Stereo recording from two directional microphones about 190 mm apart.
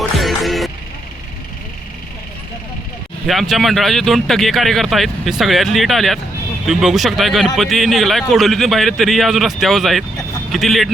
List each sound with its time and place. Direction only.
0.2 s music: centre (ahead or behind)
3.2 s speech: centre (ahead or behind)